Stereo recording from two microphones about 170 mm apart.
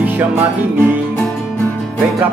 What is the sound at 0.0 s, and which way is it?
Music, 10° right (ahead or behind).